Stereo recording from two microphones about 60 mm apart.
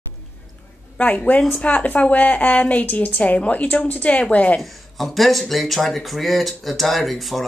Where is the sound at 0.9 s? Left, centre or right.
Left.